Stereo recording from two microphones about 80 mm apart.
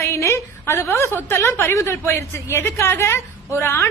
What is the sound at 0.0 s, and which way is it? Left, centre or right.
A woman's voice, left.